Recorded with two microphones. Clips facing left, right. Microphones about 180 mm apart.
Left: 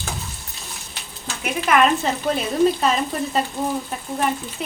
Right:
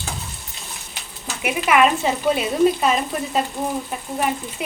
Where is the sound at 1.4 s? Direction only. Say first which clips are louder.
Right 1 dB; 10° right (ahead or behind).